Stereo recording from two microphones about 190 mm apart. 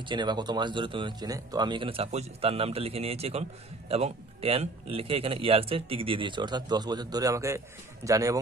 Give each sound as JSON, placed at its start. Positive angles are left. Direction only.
{"t": 0.0, "sound": "speech", "side_deg": -25}